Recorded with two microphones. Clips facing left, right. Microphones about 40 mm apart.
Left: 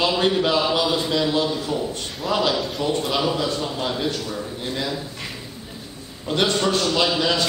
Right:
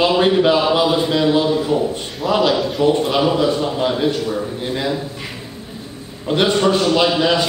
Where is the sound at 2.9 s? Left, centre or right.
Centre.